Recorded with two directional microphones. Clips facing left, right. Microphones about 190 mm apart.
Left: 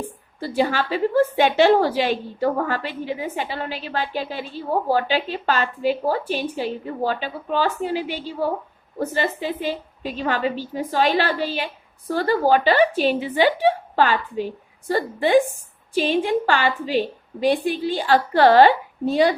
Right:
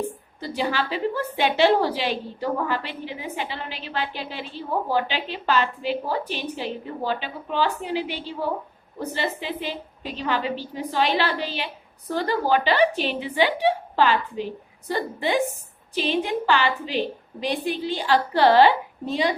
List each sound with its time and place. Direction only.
0.3 s a woman's voice: 50° left (ahead or behind)